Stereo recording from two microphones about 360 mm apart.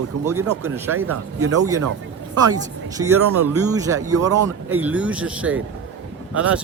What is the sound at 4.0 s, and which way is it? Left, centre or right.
Speech, right.